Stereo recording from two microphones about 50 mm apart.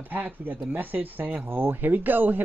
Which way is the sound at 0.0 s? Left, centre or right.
Right.